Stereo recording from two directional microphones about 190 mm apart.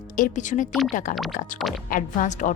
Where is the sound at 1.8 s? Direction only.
45° left (ahead or behind).